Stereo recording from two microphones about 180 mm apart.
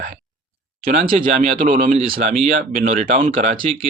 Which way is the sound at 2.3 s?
35° right (ahead or behind).